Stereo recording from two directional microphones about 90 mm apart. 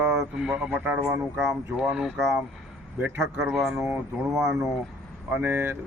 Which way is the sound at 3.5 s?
10° right (ahead or behind).